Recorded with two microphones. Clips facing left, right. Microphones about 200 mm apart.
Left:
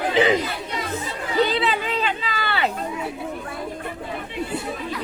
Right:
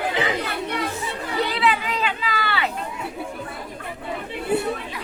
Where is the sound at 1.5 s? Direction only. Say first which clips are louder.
Even; 30° left (ahead or behind).